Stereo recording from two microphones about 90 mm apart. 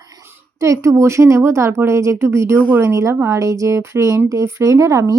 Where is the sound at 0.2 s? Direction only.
30° right (ahead or behind).